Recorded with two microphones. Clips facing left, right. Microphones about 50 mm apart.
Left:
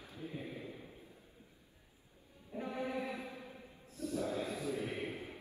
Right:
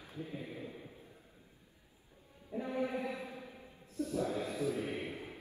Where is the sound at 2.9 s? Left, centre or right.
Right.